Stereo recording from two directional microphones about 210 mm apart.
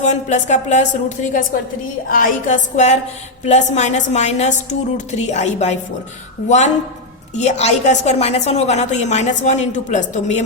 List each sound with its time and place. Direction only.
0.0 s a woman's voice: 35° left (ahead or behind)
7.3 s a woman's voice: 35° left (ahead or behind)